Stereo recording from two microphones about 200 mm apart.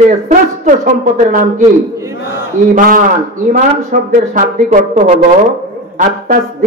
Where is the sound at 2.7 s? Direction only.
45° right (ahead or behind).